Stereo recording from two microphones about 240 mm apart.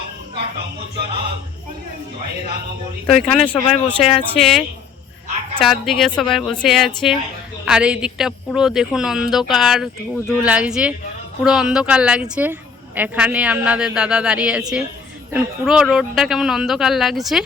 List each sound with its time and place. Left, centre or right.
3.2 s a woman's voice: centre
3.5 s speech: left
4.2 s a woman's voice: centre
5.6 s a woman's voice: centre